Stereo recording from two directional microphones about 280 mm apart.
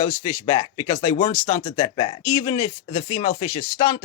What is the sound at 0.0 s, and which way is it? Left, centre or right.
Speech, centre.